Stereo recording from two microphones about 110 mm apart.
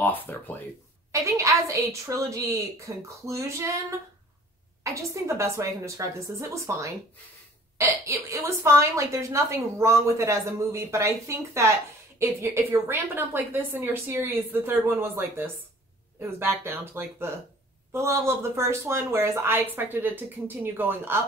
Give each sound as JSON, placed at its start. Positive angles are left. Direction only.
{"t": 0.0, "sound": "speech", "side_deg": 15}
{"t": 1.2, "sound": "a woman's voice", "side_deg": -30}
{"t": 4.9, "sound": "a woman's voice", "side_deg": -30}